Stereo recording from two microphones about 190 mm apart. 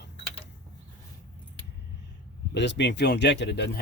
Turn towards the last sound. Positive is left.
turn(degrees=65)  # may be behind; listen again after turning